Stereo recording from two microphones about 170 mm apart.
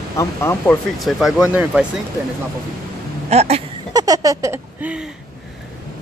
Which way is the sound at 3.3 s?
40° right (ahead or behind).